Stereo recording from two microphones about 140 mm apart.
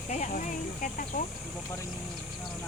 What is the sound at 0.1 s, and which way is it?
Speech, 60° left (ahead or behind).